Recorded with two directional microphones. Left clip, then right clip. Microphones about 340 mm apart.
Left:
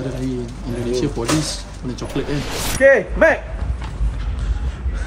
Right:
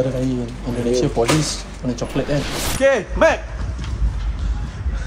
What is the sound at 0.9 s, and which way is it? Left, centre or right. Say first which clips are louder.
Speech: right 3 dB; centre.